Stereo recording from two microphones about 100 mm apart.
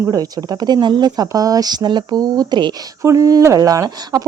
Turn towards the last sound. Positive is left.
turn(degrees=-40)  # may be behind; listen again after turning